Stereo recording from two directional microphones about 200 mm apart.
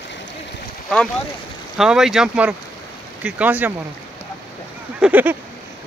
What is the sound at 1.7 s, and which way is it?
Speech, centre (ahead or behind).